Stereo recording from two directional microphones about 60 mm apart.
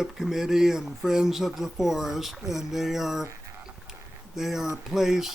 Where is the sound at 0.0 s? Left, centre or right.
Centre.